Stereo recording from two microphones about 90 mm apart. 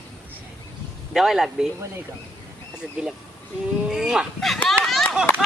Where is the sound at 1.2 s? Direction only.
5° right (ahead or behind).